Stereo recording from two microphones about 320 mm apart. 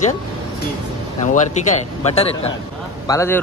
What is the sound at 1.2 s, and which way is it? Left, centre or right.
A man's voice, left.